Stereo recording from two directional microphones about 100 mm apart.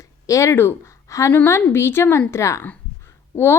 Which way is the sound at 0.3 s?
30° left (ahead or behind).